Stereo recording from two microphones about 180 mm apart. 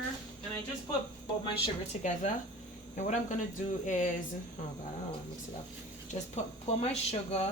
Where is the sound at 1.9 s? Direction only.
40° left (ahead or behind).